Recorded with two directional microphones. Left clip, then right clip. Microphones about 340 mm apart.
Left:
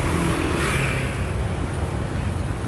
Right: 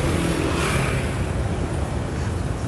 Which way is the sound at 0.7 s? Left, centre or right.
Right.